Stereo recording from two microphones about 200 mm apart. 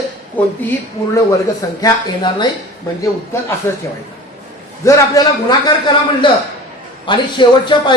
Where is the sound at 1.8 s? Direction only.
20° left (ahead or behind).